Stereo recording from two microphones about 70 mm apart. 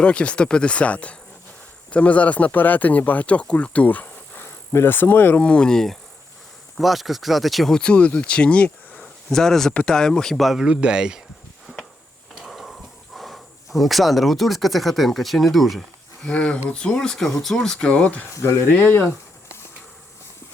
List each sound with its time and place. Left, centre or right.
0.0 s speech: centre
5.4 s speech: centre
7.8 s speech: centre
9.3 s speech: centre
12.3 s drawer open or close: centre
13.1 s speech: centre
16.2 s speech: centre
17.9 s speech: left